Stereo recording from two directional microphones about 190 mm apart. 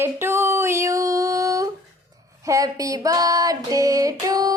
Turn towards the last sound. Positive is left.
turn(degrees=-20)  # may be behind; listen again after turning